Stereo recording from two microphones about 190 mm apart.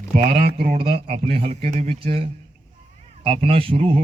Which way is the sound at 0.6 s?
50° right (ahead or behind).